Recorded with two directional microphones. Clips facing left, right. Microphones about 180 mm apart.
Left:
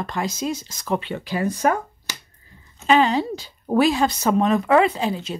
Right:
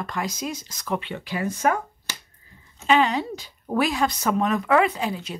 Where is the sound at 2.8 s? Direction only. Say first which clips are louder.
Left 3 dB; 35° left (ahead or behind).